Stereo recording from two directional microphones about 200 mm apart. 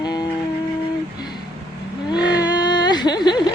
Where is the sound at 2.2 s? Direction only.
20° left (ahead or behind).